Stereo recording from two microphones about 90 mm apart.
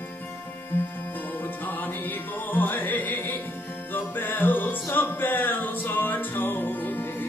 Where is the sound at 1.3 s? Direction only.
20° left (ahead or behind).